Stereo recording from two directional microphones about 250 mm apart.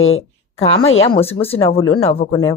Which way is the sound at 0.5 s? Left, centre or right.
Left.